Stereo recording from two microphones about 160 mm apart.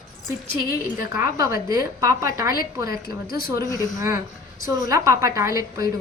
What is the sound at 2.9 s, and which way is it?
Speech, 70° left (ahead or behind).